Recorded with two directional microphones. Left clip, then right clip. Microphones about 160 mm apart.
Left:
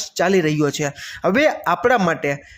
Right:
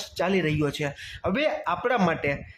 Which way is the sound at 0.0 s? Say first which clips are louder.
Left 8 dB; 30° left (ahead or behind).